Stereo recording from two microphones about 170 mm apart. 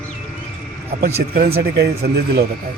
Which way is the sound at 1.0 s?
60° right (ahead or behind).